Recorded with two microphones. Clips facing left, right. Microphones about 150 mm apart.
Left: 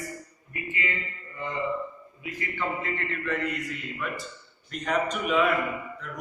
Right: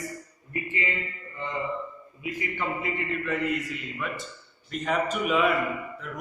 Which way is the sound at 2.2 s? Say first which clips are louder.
Right 4 dB; 15° right (ahead or behind).